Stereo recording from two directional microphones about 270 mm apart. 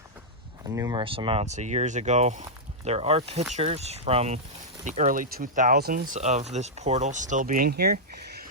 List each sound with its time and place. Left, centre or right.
0.6 s speech: centre; by 8.4 s right